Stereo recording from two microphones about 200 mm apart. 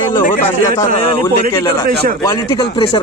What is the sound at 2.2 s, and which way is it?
Speech, 15° left (ahead or behind).